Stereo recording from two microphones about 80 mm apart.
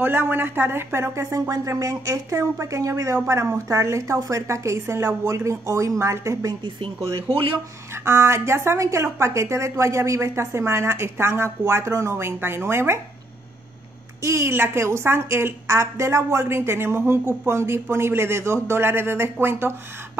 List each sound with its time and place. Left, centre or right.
0.0 s speech: right
1.5 s a woman's voice: right
7.9 s a woman's voice: right
14.2 s a woman's voice: right